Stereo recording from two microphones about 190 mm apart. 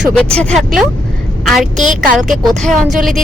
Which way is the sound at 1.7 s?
40° right (ahead or behind).